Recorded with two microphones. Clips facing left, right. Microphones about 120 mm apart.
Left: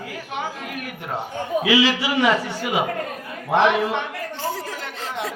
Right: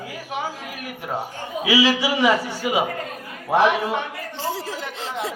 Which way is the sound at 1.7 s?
10° right (ahead or behind).